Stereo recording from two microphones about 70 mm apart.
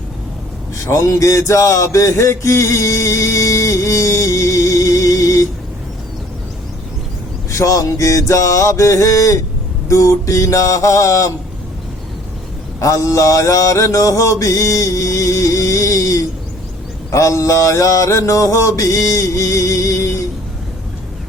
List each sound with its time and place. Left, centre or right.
0.9 s mantra: left
7.5 s mantra: left
12.8 s mantra: left